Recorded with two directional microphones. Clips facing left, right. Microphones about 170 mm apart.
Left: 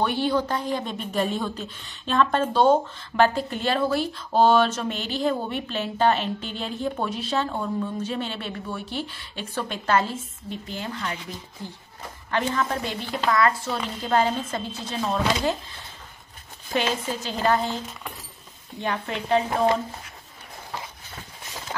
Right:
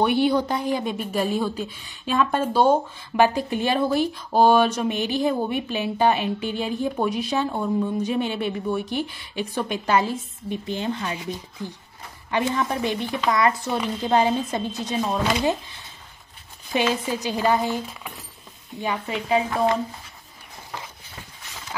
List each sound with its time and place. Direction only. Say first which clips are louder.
0.0 s a woman's voice: right 4 dB; 15° right (ahead or behind)
16.7 s a woman's voice: right 3 dB; 15° right (ahead or behind)